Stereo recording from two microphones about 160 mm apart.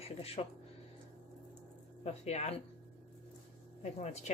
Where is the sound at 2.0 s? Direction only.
40° left (ahead or behind).